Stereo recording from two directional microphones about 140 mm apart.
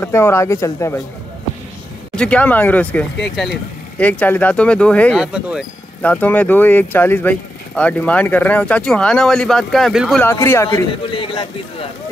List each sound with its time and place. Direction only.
0.0 s speech: 20° left (ahead or behind)
2.1 s speech: 10° left (ahead or behind)
5.1 s speech: 5° right (ahead or behind)
6.0 s speech: 10° left (ahead or behind)
10.2 s speech: 20° left (ahead or behind)
11.1 s speech: 40° left (ahead or behind)